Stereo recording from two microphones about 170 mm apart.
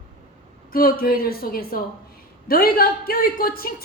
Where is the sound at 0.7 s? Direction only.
60° left (ahead or behind).